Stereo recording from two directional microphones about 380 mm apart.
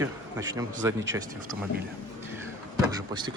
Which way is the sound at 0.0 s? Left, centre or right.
Centre.